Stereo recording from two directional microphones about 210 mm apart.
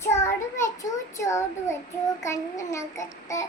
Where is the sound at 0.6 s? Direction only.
15° left (ahead or behind).